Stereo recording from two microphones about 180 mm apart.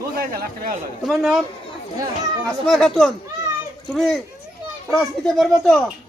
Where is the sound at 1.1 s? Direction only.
Centre (ahead or behind).